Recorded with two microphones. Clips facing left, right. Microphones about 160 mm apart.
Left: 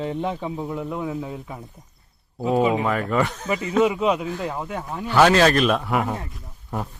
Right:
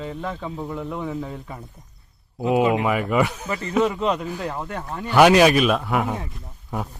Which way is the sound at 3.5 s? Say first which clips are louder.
Left 2 dB; 10° left (ahead or behind).